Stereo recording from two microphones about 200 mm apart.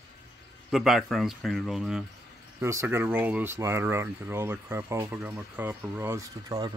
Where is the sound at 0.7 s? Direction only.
Centre (ahead or behind).